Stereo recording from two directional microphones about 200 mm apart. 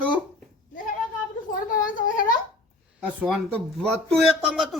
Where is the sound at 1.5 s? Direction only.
40° left (ahead or behind).